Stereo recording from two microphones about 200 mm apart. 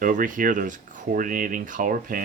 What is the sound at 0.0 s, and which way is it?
Speech, 40° right (ahead or behind).